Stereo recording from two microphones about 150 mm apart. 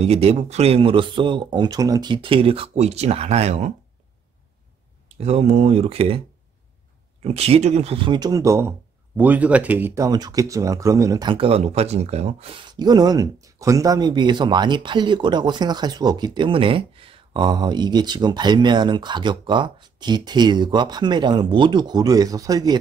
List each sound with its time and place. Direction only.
0.0 s speech: 45° right (ahead or behind); by 2.1 s 25° right (ahead or behind)
2.2 s speech: 40° right (ahead or behind)
5.0 s speech: 45° right (ahead or behind); by 22.8 s 25° right (ahead or behind)